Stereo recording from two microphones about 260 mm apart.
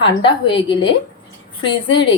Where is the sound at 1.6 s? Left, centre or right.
Left.